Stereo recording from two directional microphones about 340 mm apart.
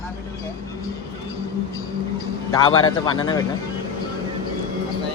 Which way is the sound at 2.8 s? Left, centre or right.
Centre.